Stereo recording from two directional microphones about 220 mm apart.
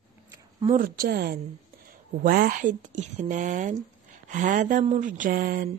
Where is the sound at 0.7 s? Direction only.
40° right (ahead or behind).